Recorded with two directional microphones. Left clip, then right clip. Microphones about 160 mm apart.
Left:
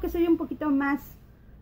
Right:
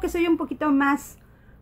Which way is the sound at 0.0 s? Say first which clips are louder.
Right 2 dB; 15° right (ahead or behind).